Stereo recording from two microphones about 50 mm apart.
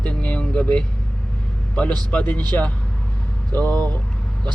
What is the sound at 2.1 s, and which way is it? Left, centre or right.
Speech, left.